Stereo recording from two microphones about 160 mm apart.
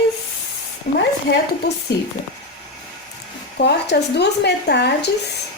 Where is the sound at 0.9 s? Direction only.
70° left (ahead or behind).